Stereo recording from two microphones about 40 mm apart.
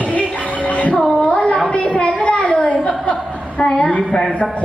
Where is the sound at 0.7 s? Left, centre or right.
Left.